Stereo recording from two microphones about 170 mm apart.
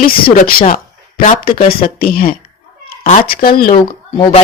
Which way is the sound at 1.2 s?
50° left (ahead or behind).